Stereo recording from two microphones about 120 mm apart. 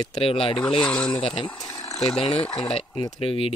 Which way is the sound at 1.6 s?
25° left (ahead or behind).